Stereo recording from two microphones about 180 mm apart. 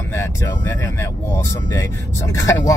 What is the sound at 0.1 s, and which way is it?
Speech, 15° left (ahead or behind).